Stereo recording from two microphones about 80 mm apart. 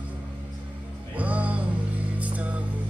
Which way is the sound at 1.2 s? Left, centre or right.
Centre.